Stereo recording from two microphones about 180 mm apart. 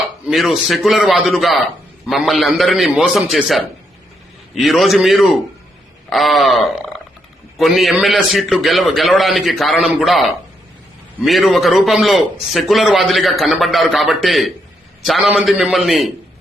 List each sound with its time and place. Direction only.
0.3 s a man's voice: centre (ahead or behind)